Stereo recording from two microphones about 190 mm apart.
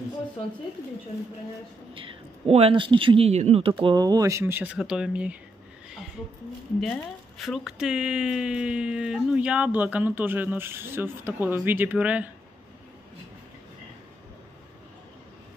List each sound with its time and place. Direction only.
2.0 s speech: 30° right (ahead or behind); by 5.4 s 5° right (ahead or behind)
6.8 s speech: centre (ahead or behind)